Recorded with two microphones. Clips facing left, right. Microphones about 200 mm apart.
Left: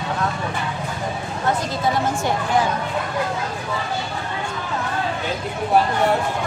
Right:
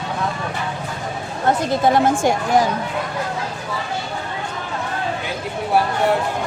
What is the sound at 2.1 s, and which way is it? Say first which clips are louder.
Speech: right 4 dB; 50° right (ahead or behind).